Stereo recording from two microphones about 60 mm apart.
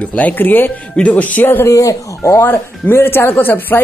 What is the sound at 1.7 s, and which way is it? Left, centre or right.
Speech, left.